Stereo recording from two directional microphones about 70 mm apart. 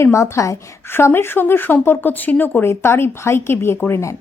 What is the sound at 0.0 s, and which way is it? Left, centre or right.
Speech, left.